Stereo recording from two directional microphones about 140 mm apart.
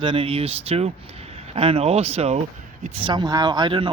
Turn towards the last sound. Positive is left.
turn(degrees=-35)  # may be behind; listen again after turning